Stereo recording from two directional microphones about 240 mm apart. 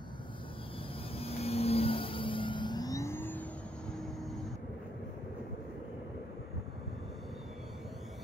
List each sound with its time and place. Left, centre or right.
1.1 s vehicle: left; by 3.4 s centre